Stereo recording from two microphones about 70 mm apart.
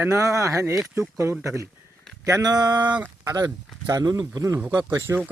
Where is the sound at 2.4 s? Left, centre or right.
Right.